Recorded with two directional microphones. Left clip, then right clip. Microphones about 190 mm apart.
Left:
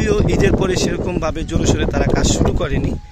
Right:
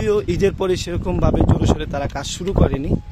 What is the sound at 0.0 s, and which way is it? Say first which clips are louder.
Speech: left 1 dB; 10° right (ahead or behind).